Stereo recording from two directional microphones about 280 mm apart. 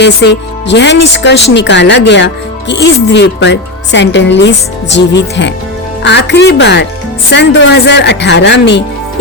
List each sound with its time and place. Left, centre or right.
0.0 s speech: left